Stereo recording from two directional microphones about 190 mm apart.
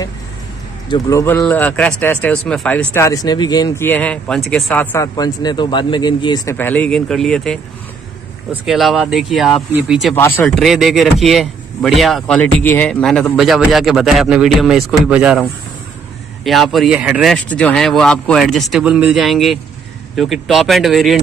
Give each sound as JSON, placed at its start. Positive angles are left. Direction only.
{"t": 0.8, "sound": "speech", "side_deg": 20}
{"t": 4.9, "sound": "speech", "side_deg": 20}
{"t": 6.5, "sound": "speech", "side_deg": 10}
{"t": 10.1, "sound": "speech", "side_deg": 10}
{"t": 16.4, "sound": "speech", "side_deg": 0}